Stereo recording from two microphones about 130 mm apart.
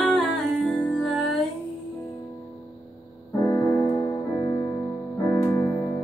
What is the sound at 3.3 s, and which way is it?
Music, 25° left (ahead or behind).